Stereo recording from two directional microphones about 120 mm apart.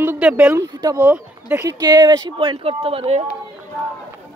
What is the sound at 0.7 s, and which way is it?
Speech, 30° right (ahead or behind).